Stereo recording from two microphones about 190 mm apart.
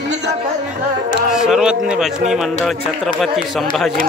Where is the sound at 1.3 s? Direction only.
5° right (ahead or behind).